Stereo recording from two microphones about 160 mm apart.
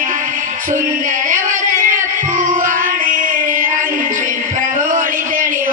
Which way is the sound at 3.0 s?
55° right (ahead or behind).